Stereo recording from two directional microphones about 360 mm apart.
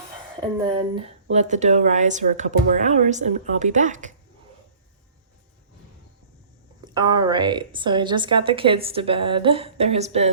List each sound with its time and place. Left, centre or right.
0.3 s speech: centre
6.8 s a woman's voice: centre